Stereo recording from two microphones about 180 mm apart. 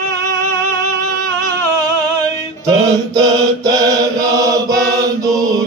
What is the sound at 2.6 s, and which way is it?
Mantra, 20° right (ahead or behind).